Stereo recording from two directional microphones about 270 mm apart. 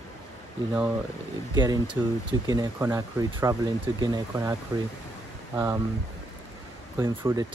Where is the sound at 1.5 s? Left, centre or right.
Centre.